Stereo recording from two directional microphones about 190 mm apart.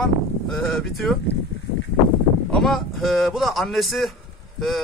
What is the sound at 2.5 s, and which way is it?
Speech, centre (ahead or behind).